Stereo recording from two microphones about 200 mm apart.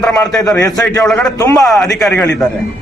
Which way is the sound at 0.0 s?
Centre (ahead or behind).